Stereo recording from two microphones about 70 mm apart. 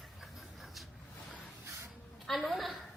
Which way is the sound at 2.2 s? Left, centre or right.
Centre.